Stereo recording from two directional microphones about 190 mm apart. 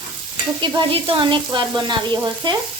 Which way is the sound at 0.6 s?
25° right (ahead or behind).